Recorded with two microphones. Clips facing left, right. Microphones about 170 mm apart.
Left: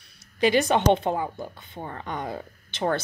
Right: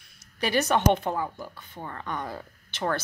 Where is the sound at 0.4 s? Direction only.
20° left (ahead or behind).